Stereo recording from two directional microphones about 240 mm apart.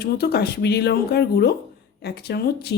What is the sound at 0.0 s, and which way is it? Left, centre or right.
A woman's voice, left.